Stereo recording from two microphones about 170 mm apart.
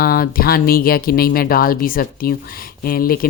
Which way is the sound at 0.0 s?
60° left (ahead or behind).